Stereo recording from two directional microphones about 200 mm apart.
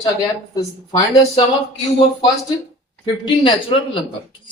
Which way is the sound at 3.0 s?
25° left (ahead or behind).